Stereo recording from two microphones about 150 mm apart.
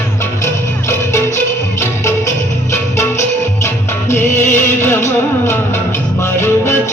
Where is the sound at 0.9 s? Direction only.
20° left (ahead or behind).